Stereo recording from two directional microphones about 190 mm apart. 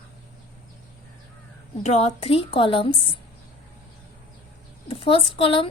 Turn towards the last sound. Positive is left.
turn(degrees=30)  # may be behind; listen again after turning